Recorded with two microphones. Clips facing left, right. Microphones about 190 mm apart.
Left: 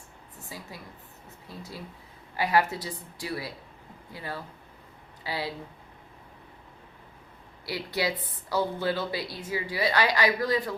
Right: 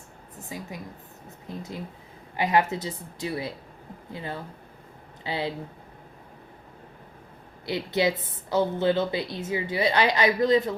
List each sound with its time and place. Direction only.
0.4 s a woman's voice: 20° right (ahead or behind)
7.6 s a woman's voice: 20° right (ahead or behind)